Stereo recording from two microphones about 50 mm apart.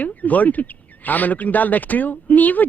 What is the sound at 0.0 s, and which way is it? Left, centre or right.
Speech, left.